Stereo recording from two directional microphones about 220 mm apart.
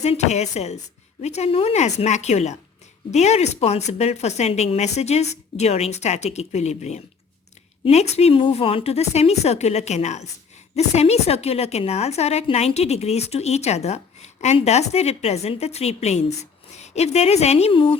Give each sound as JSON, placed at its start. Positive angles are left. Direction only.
{"t": 0.0, "sound": "a woman's voice", "side_deg": 30}